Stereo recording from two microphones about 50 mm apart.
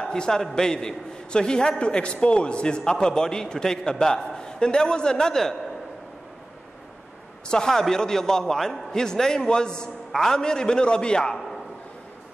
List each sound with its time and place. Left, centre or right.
0.0 s a man's voice: centre
7.4 s a man's voice: centre